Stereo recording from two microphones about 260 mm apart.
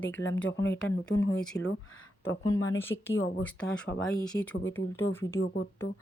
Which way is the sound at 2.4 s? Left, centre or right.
Centre.